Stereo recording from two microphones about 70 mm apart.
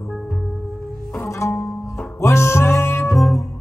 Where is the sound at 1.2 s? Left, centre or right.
Left.